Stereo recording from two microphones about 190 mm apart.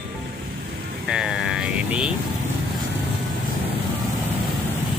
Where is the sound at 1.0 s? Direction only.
5° right (ahead or behind).